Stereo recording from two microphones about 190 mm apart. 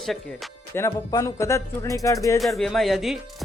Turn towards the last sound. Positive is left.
turn(degrees=0)  # may be behind; listen again after turning